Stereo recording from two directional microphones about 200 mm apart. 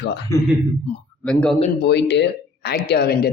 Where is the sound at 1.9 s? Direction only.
60° left (ahead or behind).